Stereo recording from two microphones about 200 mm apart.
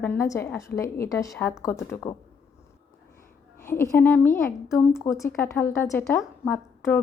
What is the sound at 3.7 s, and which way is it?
A woman's voice, 10° left (ahead or behind).